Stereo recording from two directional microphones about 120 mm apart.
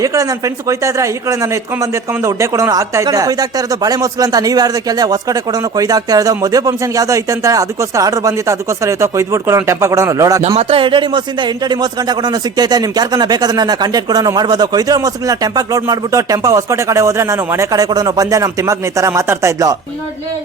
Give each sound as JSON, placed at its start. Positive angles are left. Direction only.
{"t": 0.0, "sound": "speech", "side_deg": -30}
{"t": 10.6, "sound": "speech", "side_deg": -50}